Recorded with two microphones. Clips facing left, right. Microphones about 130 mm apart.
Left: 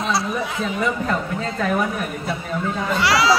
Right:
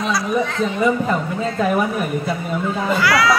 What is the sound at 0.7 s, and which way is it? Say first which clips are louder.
A woman's voice: right 4 dB; 10° right (ahead or behind).